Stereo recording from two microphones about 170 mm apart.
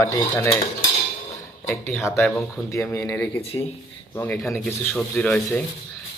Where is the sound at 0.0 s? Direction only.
15° left (ahead or behind).